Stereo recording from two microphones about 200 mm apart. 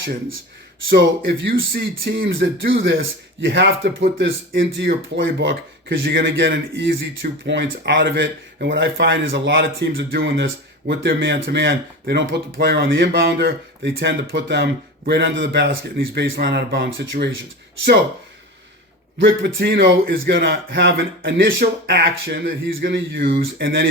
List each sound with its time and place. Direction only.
0.9 s speech: 50° right (ahead or behind)
3.4 s speech: 65° right (ahead or behind)
4.0 s speech: 55° right (ahead or behind); by 9.5 s 70° right (ahead or behind)
9.5 s speech: 50° right (ahead or behind)
10.2 s speech: 70° right (ahead or behind)
10.8 s speech: 55° right (ahead or behind)
14.3 s speech: 65° right (ahead or behind)
19.2 s speech: 65° right (ahead or behind)
19.6 s speech: 55° right (ahead or behind)